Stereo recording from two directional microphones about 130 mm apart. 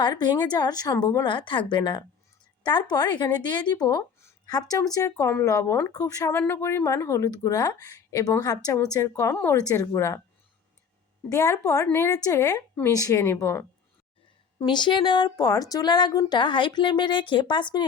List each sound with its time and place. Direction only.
0.0 s a woman's voice: 35° left (ahead or behind)
11.3 s speech: 25° left (ahead or behind)
14.6 s a woman's voice: 35° left (ahead or behind)